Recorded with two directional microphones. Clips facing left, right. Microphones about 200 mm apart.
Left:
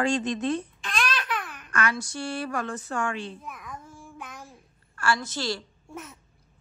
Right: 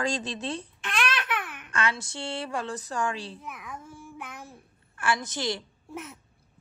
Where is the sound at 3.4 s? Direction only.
5° right (ahead or behind).